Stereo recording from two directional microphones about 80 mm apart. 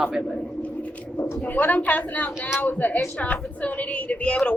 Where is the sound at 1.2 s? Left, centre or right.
Left.